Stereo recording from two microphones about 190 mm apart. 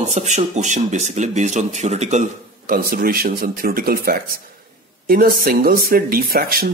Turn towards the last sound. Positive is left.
turn(degrees=-50)  # may be behind; listen again after turning